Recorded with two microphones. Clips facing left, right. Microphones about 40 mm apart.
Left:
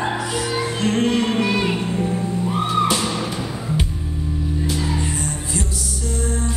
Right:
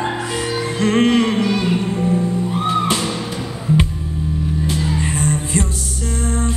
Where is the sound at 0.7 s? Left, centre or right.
Right.